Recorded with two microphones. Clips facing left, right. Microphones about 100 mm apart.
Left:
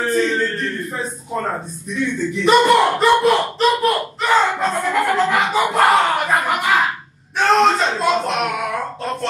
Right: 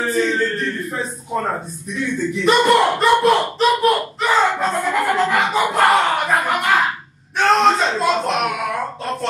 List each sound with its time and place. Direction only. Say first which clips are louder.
0.0 s a man's voice: even; centre (ahead or behind)
1.9 s slap: left 1 dB; centre (ahead or behind)
7.3 s a sound: even; centre (ahead or behind)